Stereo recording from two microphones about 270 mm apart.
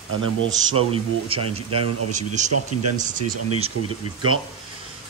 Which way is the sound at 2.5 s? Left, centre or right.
Right.